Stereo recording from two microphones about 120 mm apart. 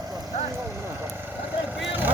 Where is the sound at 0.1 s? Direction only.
25° right (ahead or behind).